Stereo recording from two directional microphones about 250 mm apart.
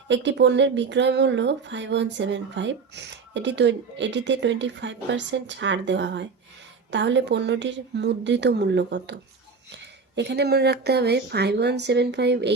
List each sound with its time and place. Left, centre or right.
0.1 s speech: right